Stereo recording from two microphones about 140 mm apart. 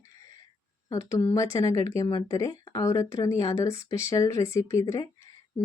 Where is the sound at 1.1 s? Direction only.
20° left (ahead or behind).